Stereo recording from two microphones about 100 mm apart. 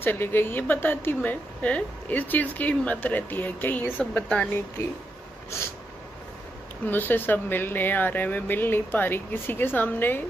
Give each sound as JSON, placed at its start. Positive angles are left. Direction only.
{"t": 0.0, "sound": "a woman's voice", "side_deg": 20}
{"t": 6.9, "sound": "speech", "side_deg": 20}